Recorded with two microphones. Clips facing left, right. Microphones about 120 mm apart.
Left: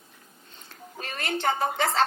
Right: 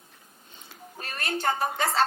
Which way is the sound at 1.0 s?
90° left.